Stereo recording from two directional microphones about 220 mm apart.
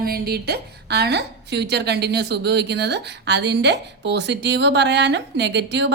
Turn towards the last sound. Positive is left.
turn(degrees=-55)  # may be behind; listen again after turning